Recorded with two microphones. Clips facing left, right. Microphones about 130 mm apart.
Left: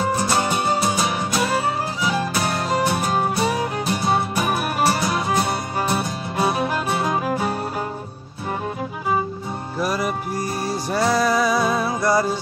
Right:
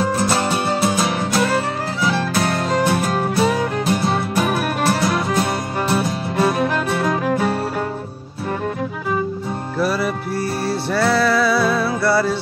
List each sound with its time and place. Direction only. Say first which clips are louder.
0.3 s music: right 1 dB; centre (ahead or behind)
9.8 s music: right 3 dB; 15° left (ahead or behind)